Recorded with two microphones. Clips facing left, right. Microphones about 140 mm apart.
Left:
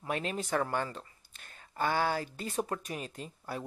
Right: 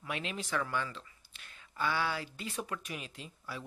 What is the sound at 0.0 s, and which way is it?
Speech, 40° left (ahead or behind).